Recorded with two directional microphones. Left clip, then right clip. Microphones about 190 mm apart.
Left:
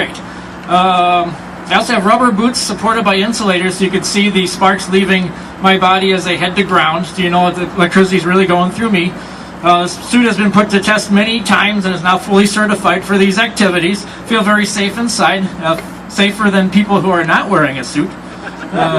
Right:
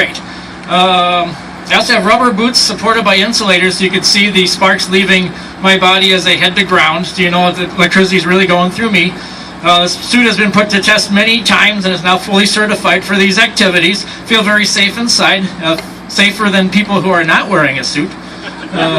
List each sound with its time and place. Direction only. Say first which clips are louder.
0.7 s a man's voice: right 1 dB; 25° right (ahead or behind)